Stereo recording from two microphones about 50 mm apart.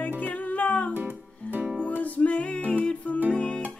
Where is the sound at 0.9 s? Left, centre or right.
Right.